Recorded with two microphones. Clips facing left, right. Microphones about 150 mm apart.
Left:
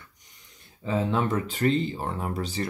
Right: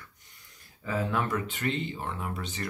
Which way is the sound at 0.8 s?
25° left (ahead or behind).